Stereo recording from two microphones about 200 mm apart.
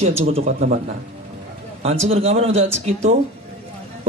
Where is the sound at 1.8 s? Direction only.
30° right (ahead or behind).